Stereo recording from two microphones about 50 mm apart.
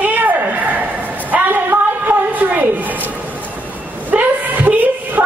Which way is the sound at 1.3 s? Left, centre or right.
Right.